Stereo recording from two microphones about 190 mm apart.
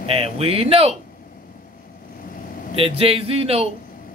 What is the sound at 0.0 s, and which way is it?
Speech, 30° right (ahead or behind).